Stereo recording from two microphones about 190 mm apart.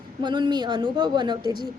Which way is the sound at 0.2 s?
25° right (ahead or behind).